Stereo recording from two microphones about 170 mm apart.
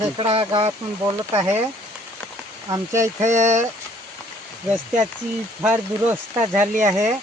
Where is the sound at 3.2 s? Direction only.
45° right (ahead or behind).